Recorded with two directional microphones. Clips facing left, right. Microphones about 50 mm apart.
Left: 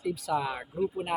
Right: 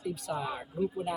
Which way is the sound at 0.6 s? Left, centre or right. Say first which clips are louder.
Left 1 dB; left.